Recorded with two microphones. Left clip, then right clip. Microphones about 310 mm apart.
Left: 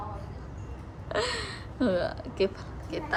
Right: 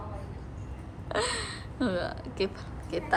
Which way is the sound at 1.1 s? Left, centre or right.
Centre.